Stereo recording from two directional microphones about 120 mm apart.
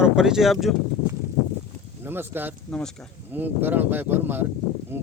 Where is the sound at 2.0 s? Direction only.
20° right (ahead or behind).